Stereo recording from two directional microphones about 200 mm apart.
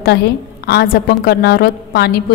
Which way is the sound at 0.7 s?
50° left (ahead or behind).